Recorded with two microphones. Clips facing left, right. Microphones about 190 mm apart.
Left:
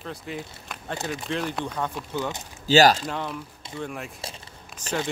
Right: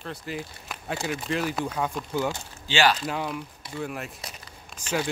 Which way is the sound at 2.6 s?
40° left (ahead or behind).